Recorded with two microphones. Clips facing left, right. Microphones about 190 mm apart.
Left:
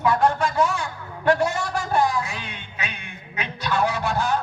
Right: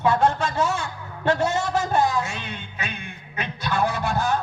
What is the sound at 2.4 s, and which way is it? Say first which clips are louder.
Music: right 1 dB; 55° right (ahead or behind).